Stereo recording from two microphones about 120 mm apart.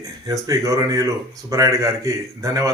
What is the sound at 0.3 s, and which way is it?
Speech, 30° right (ahead or behind).